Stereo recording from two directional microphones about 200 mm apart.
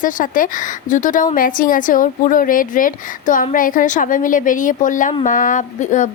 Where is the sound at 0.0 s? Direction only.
40° left (ahead or behind).